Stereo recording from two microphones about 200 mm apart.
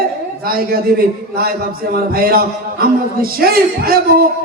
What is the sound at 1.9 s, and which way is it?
Speech, 50° right (ahead or behind).